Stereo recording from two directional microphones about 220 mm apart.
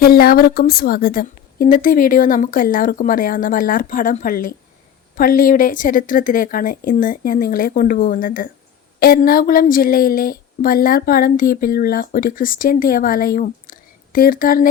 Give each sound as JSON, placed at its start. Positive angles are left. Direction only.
{"t": 0.0, "sound": "speech", "side_deg": 45}